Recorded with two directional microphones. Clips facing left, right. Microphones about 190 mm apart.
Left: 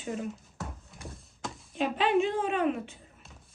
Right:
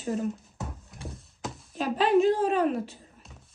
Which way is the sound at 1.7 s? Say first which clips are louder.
Right 3 dB; 40° right (ahead or behind).